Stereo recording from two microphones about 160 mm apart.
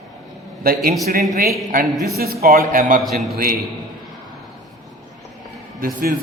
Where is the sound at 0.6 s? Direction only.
65° right (ahead or behind).